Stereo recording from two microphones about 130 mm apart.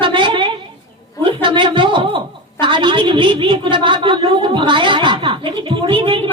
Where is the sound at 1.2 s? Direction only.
40° right (ahead or behind).